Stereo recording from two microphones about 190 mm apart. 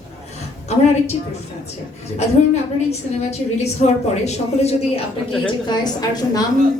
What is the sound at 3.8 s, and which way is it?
Speech, 35° left (ahead or behind).